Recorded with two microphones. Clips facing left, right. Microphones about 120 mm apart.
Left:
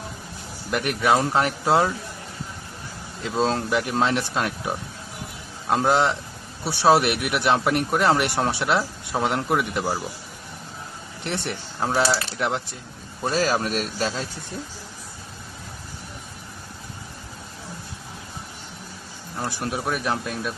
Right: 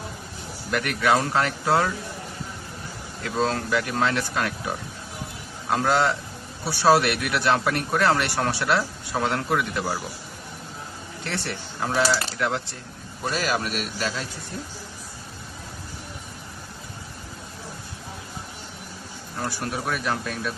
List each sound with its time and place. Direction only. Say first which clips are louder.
0.7 s a man's voice: left 1 dB; 20° left (ahead or behind)
3.2 s a man's voice: left 2 dB; 25° left (ahead or behind)
11.2 s a man's voice: left 2 dB; 20° left (ahead or behind)
13.3 s a man's voice: left 4 dB; 35° left (ahead or behind)
19.5 s a man's voice: left 2 dB; 20° left (ahead or behind)